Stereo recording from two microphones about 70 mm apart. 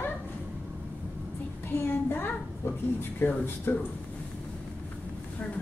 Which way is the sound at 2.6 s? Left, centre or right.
Left.